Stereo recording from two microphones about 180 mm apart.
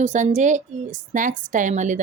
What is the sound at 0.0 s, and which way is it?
A woman's voice, 40° right (ahead or behind).